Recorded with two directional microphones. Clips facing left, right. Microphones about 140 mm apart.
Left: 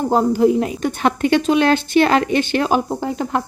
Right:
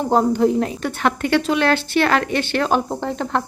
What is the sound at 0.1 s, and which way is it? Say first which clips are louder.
A woman's voice: left 1 dB; 5° left (ahead or behind).